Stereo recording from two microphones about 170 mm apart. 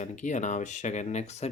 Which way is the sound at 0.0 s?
45° left (ahead or behind).